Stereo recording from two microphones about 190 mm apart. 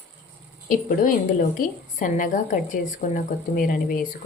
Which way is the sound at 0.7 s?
45° left (ahead or behind).